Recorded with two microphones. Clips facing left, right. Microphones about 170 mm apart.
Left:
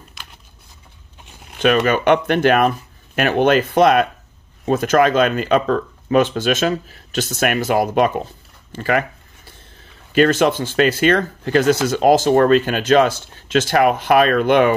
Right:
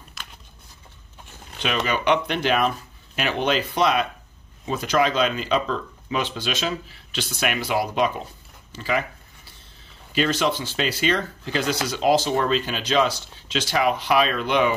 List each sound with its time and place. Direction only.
0.2 s a sound: centre (ahead or behind)
1.6 s speech: 50° left (ahead or behind)
10.1 s speech: 55° left (ahead or behind)